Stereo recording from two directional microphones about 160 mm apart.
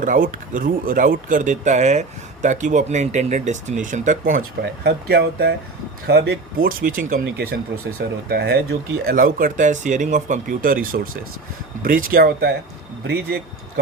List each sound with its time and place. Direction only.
0.0 s speech: 55° right (ahead or behind)
7.9 s speech: 80° right
9.0 s speech: 60° right (ahead or behind); by 13.4 s 85° right